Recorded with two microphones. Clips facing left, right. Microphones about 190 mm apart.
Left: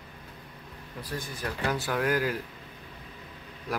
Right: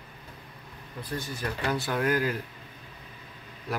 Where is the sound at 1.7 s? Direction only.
10° left (ahead or behind).